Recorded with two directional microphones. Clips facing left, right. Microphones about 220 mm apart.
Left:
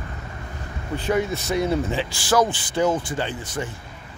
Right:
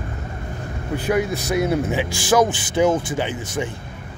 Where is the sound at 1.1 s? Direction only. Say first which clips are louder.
Right 2 dB; 5° right (ahead or behind).